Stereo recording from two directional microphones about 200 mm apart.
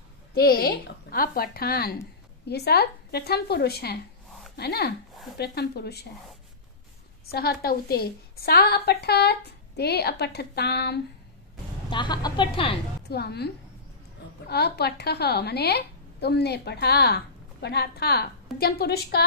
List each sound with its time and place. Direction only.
0.3 s a woman's voice: 50° left (ahead or behind)
7.2 s a woman's voice: 50° left (ahead or behind)
11.9 s speech: 20° left (ahead or behind)
13.1 s a woman's voice: 55° left (ahead or behind)
14.5 s a woman's voice: 55° left (ahead or behind)